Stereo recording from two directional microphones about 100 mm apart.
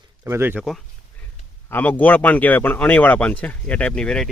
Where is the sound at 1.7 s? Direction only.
15° left (ahead or behind).